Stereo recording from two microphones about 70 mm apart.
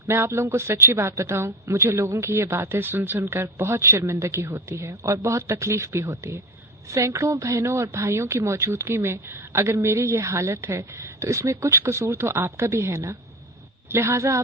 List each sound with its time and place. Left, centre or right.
0.1 s a woman's voice: right